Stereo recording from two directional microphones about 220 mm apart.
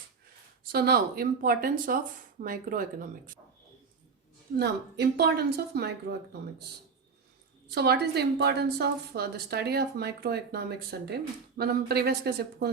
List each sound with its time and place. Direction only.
0.7 s speech: 45° right (ahead or behind)
4.5 s a woman's voice: 50° right (ahead or behind)
7.7 s a woman's voice: 45° right (ahead or behind)